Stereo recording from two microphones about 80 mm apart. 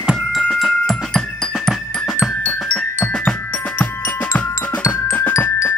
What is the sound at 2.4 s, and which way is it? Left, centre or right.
Mallet percussion, centre.